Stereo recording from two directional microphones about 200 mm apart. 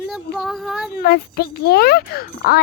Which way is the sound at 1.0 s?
50° left (ahead or behind).